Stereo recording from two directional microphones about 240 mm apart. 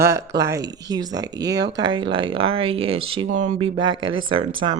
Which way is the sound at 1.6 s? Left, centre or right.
Right.